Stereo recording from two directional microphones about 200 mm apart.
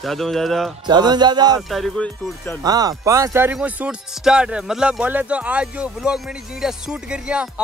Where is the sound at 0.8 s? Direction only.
20° right (ahead or behind).